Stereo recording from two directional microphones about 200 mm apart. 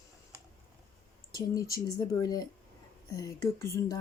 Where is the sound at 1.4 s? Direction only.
15° left (ahead or behind).